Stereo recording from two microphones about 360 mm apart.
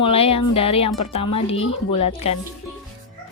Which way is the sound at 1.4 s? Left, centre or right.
Left.